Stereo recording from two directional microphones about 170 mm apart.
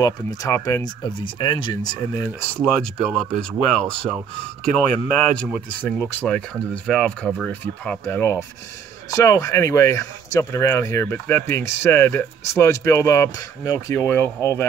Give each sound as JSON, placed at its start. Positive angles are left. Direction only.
{"t": 0.0, "sound": "speech", "side_deg": 20}
{"t": 2.6, "sound": "speech", "side_deg": 5}
{"t": 5.4, "sound": "speech", "side_deg": 10}